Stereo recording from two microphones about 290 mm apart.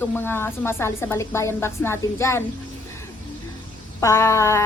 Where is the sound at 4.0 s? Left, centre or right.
Centre.